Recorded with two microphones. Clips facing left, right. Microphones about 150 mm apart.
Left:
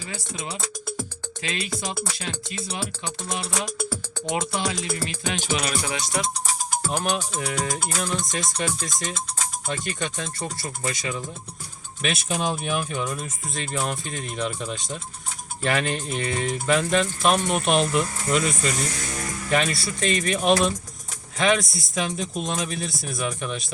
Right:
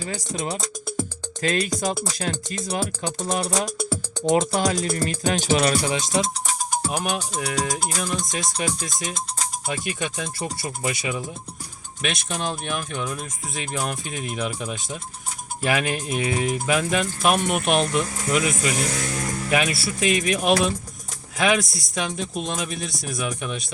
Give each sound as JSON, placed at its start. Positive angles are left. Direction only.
{"t": 0.1, "sound": "music", "side_deg": -40}
{"t": 3.2, "sound": "speech", "side_deg": -40}
{"t": 6.0, "sound": "speech", "side_deg": -20}
{"t": 6.9, "sound": "speech", "side_deg": -10}
{"t": 12.0, "sound": "speech", "side_deg": 5}